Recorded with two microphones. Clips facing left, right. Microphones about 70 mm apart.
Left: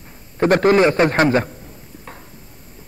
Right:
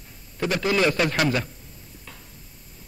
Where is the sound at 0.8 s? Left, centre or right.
Left.